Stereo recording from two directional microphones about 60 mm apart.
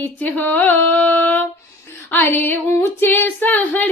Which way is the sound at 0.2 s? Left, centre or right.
Left.